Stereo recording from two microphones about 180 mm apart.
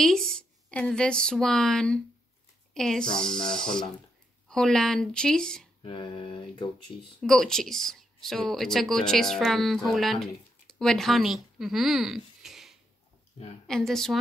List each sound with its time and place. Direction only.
0.0 s a woman's voice: 5° left (ahead or behind)
5.8 s a sound: 30° left (ahead or behind)
7.2 s a woman's voice: 5° left (ahead or behind)